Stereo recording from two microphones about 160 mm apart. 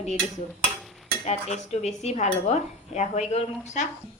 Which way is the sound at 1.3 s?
45° left (ahead or behind).